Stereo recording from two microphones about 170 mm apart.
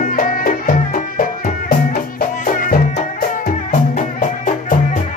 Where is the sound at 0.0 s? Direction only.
50° left (ahead or behind).